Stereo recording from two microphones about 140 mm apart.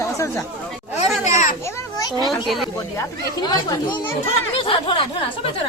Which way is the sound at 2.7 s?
25° left (ahead or behind).